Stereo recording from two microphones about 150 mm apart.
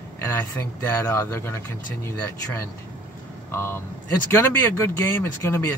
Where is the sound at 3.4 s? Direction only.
15° left (ahead or behind).